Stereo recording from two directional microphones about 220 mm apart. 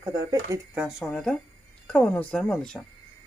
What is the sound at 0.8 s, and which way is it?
Speech, centre (ahead or behind).